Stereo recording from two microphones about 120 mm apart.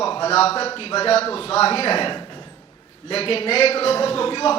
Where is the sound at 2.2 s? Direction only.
40° left (ahead or behind).